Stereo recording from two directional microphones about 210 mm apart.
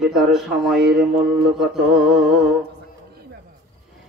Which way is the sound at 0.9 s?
50° right (ahead or behind).